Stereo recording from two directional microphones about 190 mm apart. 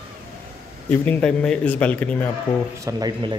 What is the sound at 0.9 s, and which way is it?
A man's voice, 10° left (ahead or behind).